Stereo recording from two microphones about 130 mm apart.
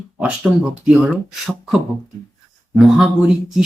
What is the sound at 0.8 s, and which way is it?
Speech, 10° right (ahead or behind).